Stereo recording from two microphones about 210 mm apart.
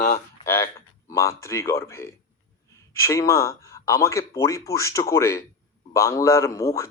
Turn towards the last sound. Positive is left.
turn(degrees=15)  # may be behind; listen again after turning